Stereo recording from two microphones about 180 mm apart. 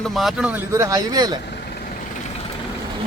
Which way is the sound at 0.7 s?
20° right (ahead or behind).